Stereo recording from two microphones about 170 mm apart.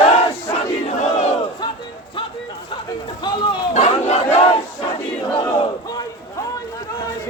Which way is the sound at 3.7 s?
40° left (ahead or behind).